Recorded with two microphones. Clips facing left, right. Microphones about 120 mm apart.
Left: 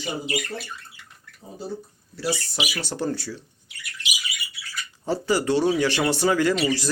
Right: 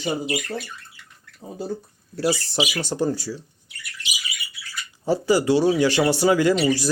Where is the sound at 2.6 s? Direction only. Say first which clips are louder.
Right 5 dB; 25° right (ahead or behind).